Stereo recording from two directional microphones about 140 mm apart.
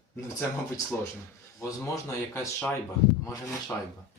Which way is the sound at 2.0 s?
20° left (ahead or behind).